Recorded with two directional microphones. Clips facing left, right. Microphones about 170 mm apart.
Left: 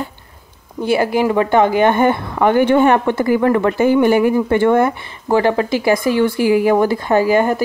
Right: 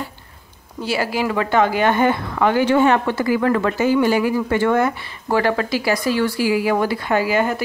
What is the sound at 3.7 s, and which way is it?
Speech, 55° left (ahead or behind).